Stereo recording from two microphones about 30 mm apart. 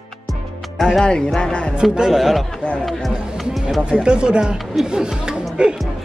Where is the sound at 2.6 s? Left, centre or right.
Left.